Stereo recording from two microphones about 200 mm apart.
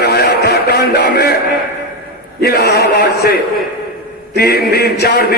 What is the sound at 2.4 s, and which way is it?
A man's voice, 50° left (ahead or behind).